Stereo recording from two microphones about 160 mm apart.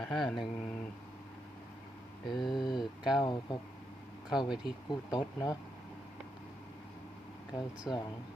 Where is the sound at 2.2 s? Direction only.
30° left (ahead or behind).